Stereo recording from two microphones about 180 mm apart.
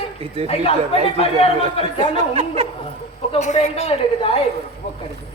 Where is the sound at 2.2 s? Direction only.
35° right (ahead or behind).